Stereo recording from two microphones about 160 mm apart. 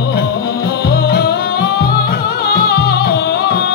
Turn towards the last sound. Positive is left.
turn(degrees=90)